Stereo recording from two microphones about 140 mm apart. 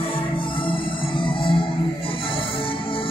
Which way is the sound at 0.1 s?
40° left (ahead or behind).